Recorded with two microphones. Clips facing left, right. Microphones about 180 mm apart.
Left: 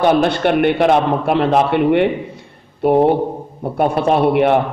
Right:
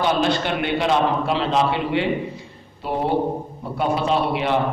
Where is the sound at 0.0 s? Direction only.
60° left (ahead or behind).